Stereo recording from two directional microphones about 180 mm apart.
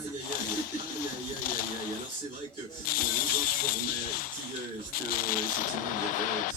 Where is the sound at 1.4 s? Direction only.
50° left (ahead or behind).